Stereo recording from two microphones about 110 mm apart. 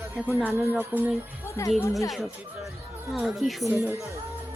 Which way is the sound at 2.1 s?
Centre (ahead or behind).